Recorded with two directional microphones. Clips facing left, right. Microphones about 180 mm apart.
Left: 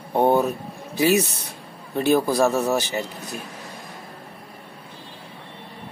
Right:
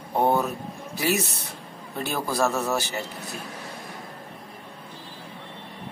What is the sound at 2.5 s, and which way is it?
Speech, 35° left (ahead or behind).